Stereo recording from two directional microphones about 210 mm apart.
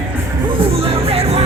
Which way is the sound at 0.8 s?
30° right (ahead or behind).